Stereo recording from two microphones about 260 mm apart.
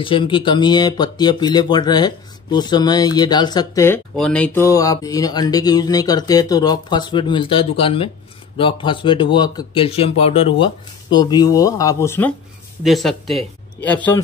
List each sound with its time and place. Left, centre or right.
0.0 s speech: centre